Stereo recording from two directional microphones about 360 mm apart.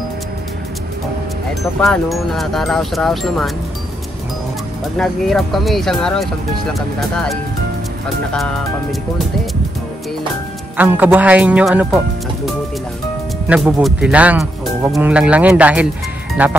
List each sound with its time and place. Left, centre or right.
1.8 s speech: centre
4.9 s speech: centre
10.8 s speech: centre
13.5 s speech: centre